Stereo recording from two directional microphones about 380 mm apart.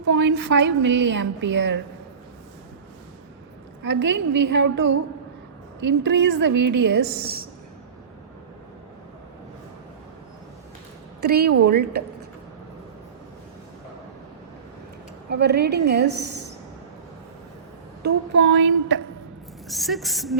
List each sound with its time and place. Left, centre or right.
0.1 s a woman's voice: right
3.8 s a woman's voice: right
11.2 s a woman's voice: right
15.3 s a woman's voice: right
18.0 s a woman's voice: right
19.6 s a woman's voice: centre